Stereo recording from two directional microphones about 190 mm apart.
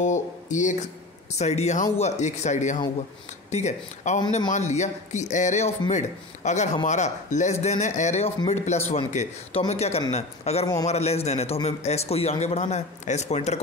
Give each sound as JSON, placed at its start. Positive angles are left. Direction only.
{"t": 0.0, "sound": "a man's voice", "side_deg": 40}